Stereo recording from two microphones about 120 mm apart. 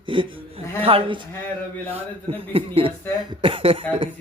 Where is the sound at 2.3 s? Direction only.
50° right (ahead or behind).